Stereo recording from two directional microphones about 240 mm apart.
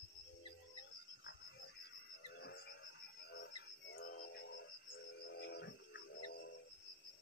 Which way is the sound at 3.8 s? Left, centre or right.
Left.